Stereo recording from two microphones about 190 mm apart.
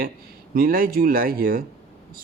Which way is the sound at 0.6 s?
50° right (ahead or behind).